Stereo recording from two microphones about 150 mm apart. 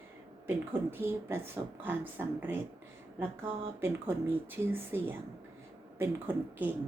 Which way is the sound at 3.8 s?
15° right (ahead or behind).